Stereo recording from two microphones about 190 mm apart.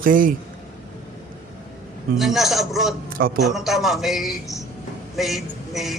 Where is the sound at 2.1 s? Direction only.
Centre (ahead or behind).